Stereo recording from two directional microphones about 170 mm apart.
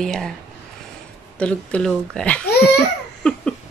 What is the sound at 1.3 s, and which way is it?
Speech, 5° left (ahead or behind).